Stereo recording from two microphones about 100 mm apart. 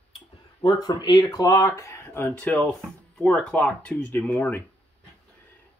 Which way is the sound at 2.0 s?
20° left (ahead or behind).